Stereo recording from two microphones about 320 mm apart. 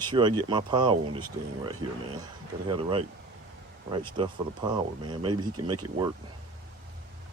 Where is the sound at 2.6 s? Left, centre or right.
Centre.